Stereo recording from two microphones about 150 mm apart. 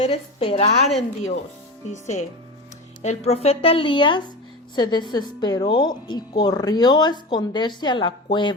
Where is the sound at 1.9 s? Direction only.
50° left (ahead or behind).